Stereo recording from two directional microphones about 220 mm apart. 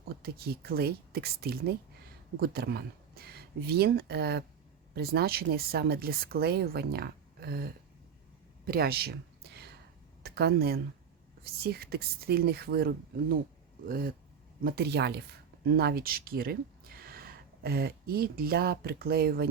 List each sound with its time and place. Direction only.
0.2 s speech: 45° right (ahead or behind)
8.6 s a sound: 45° right (ahead or behind)
10.2 s speech: 45° right (ahead or behind)